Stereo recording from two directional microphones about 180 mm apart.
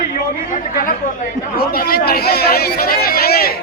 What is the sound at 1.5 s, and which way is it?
Speech, 55° left (ahead or behind).